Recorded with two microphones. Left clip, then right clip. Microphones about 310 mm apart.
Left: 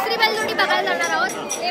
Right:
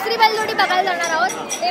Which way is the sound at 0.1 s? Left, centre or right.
Centre.